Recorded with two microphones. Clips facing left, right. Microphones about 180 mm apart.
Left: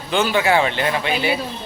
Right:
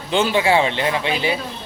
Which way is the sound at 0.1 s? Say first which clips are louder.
Right 1 dB; 25° right (ahead or behind).